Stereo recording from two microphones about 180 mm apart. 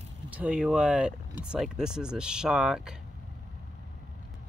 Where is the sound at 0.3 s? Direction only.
5° right (ahead or behind).